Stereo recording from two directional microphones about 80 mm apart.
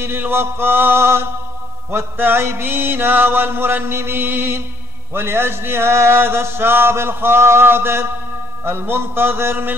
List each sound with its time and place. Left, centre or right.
0.0 s mantra: right
5.1 s a sound: right
8.6 s mantra: right